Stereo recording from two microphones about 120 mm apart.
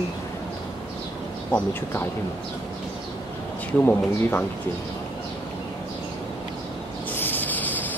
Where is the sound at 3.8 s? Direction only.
15° left (ahead or behind).